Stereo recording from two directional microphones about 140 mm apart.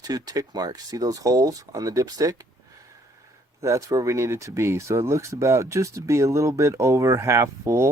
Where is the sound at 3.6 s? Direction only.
20° right (ahead or behind).